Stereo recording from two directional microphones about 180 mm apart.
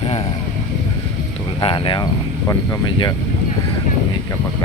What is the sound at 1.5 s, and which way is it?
Speech, 25° left (ahead or behind).